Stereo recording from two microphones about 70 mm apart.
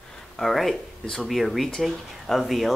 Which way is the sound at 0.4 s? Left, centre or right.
Centre.